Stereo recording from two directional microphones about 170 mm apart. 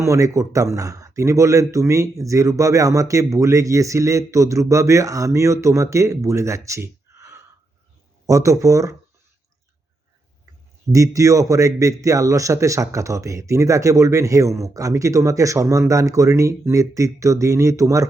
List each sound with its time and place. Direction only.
0.0 s speech: 20° right (ahead or behind)
10.9 s speech: 20° right (ahead or behind)